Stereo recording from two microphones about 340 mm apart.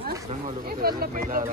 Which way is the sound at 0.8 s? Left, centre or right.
Right.